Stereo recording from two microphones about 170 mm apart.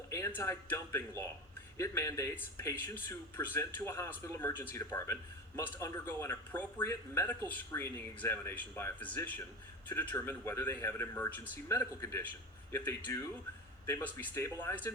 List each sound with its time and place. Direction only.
0.1 s speech: 15° left (ahead or behind)